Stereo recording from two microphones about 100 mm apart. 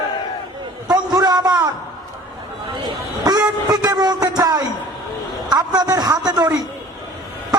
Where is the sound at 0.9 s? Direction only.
40° right (ahead or behind).